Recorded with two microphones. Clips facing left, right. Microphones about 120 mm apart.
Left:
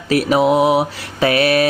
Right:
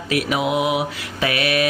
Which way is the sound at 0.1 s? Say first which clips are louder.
Left 7 dB; 35° left (ahead or behind).